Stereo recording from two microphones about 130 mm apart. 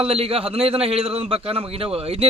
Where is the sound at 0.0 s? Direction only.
50° right (ahead or behind).